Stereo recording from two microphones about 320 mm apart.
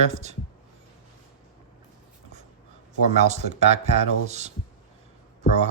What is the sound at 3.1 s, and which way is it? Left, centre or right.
Speech, right.